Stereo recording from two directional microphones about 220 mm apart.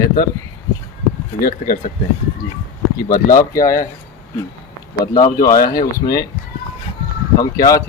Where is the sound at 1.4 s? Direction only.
40° left (ahead or behind).